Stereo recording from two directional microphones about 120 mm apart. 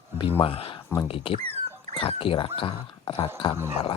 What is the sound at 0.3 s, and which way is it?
Speech, 50° left (ahead or behind).